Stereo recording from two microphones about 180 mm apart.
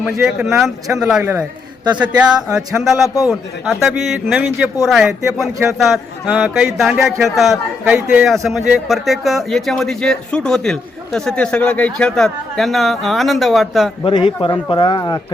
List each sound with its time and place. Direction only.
0.0 s speech: 5° right (ahead or behind)
7.9 s speech: 15° right (ahead or behind)
8.4 s speech: centre (ahead or behind)
14.0 s speech: 30° left (ahead or behind)